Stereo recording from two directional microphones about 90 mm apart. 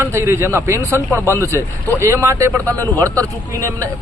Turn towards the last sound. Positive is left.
turn(degrees=-35)  # may be behind; listen again after turning